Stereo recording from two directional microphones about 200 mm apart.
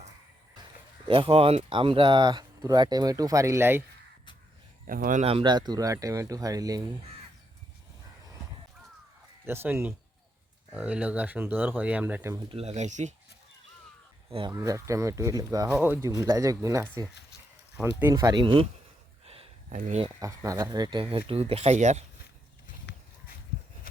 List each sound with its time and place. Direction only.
1.0 s speech: 25° right (ahead or behind); by 3.8 s 10° right (ahead or behind)
4.9 s speech: 45° right (ahead or behind)
5.2 s speech: 25° right (ahead or behind)
9.4 s speech: 10° right (ahead or behind)
12.5 s speech: 30° right (ahead or behind)
14.3 s speech: 25° right (ahead or behind)
14.5 s speech: 15° right (ahead or behind)
18.1 s speech: 20° right (ahead or behind)
19.2 s a sound: 30° right (ahead or behind)
19.7 s speech: 35° right (ahead or behind)
20.1 s speech: 15° right (ahead or behind); by 22.0 s 35° right (ahead or behind)
22.9 s horse: 55° left (ahead or behind)